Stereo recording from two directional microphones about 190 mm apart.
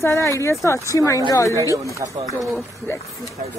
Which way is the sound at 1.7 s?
15° right (ahead or behind).